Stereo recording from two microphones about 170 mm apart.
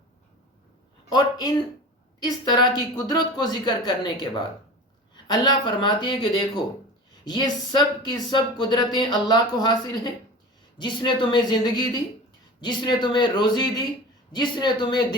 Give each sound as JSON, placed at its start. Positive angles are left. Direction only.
{"t": 1.1, "sound": "speech", "side_deg": 25}